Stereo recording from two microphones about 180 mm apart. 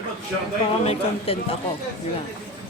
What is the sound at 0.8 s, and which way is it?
Speech, 35° left (ahead or behind).